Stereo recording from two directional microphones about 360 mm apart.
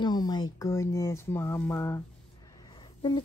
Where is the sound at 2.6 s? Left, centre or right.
Centre.